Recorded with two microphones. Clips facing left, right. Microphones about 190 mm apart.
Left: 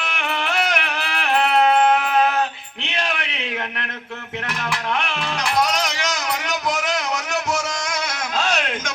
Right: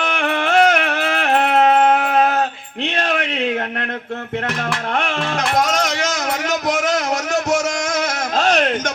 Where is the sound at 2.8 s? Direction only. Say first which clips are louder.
Right 6 dB; 45° right (ahead or behind).